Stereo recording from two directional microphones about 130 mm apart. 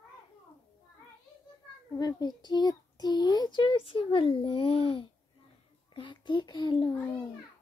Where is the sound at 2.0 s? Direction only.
30° left (ahead or behind).